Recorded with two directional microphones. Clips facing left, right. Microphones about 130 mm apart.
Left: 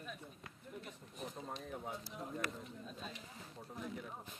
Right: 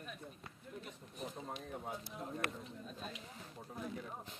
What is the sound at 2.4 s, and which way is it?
Speech, 55° right (ahead or behind).